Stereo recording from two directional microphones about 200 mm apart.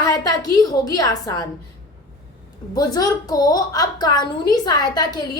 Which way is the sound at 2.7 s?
20° left (ahead or behind).